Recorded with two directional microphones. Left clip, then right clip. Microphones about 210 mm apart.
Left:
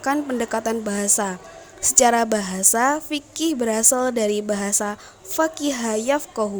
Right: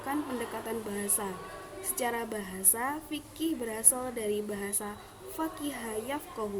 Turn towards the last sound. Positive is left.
turn(degrees=50)  # may be behind; listen again after turning